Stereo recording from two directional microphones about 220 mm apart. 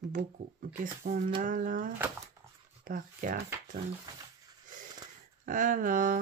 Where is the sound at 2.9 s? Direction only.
35° right (ahead or behind).